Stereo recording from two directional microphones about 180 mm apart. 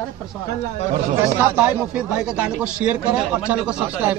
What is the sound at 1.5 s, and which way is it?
Speech, 10° right (ahead or behind).